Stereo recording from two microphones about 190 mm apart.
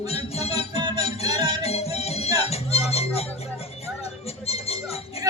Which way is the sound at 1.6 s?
35° left (ahead or behind).